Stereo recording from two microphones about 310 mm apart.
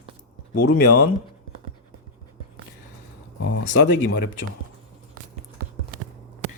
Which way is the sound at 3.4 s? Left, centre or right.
Left.